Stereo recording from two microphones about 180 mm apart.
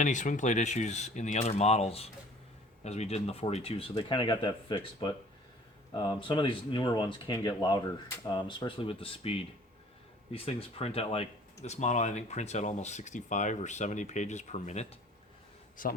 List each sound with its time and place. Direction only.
0.0 s speech: 45° left (ahead or behind)
15.8 s a man's voice: 50° left (ahead or behind)